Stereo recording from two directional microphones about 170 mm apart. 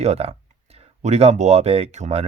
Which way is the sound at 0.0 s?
35° right (ahead or behind).